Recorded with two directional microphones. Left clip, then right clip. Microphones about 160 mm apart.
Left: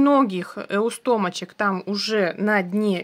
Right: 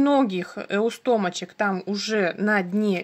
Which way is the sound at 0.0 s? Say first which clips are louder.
Left 2 dB; 15° left (ahead or behind).